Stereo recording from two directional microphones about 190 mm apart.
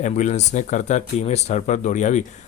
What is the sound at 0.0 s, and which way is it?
Speech, 40° left (ahead or behind).